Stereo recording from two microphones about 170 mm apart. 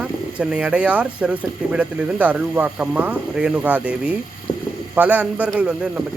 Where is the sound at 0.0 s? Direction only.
5° right (ahead or behind).